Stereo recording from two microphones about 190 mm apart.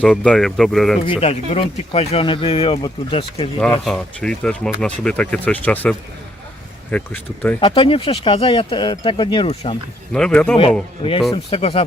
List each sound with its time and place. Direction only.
0.0 s speech: 5° left (ahead or behind)
1.0 s speech: 30° left (ahead or behind)
3.8 s speech: 5° left (ahead or behind)
7.6 s speech: 25° left (ahead or behind)
10.1 s speech: 5° left (ahead or behind)
11.0 s speech: 35° left (ahead or behind)